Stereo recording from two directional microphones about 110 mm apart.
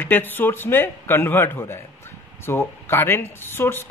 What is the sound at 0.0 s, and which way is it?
Speech, 20° left (ahead or behind).